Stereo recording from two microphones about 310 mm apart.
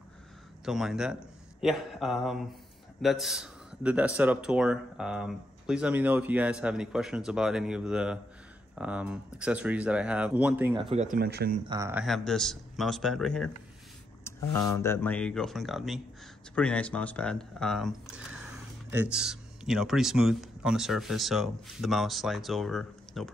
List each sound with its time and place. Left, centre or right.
0.7 s a man's voice: centre; by 11.5 s right
11.7 s a man's voice: centre